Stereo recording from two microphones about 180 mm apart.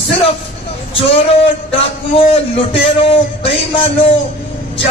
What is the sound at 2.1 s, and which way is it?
A man's voice, 30° left (ahead or behind).